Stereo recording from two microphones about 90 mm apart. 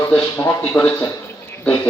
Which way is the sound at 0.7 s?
20° left (ahead or behind).